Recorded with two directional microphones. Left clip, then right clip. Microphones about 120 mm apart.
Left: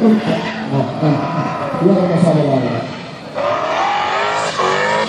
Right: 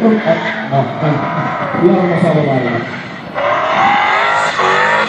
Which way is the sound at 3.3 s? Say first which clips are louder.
Right 4 dB; 30° left (ahead or behind).